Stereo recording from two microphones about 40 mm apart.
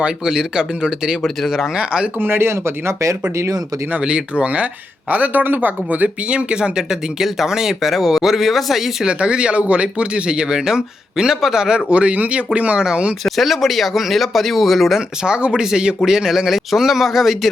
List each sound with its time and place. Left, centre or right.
0.0 s speech: centre
2.2 s speech: right
4.0 s speech: right
4.4 s speech: right
6.3 s speech: right
7.2 s speech: centre
9.0 s speech: right; by 11.6 s centre
11.6 s speech: right
13.2 s speech: centre
15.2 s speech: right; by 17.5 s centre